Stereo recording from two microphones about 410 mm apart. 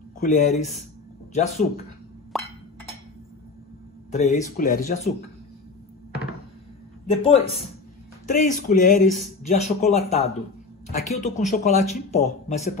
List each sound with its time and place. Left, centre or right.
0.2 s speech: centre
2.3 s a sound: centre
4.1 s speech: centre
7.2 s speech: centre